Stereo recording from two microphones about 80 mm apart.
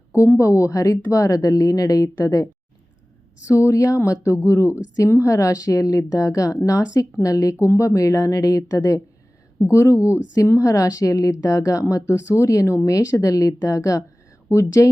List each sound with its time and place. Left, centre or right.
0.1 s speech: left